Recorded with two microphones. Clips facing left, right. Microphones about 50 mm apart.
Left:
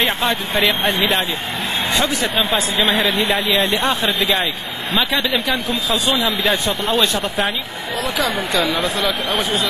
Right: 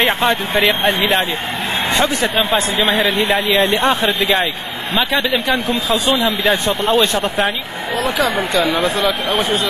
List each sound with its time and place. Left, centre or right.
0.3 s speech: centre
3.8 s speech: centre
4.2 s speech: centre
8.5 s speech: centre